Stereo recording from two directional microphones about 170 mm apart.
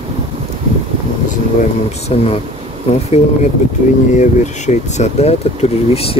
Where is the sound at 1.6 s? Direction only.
40° left (ahead or behind).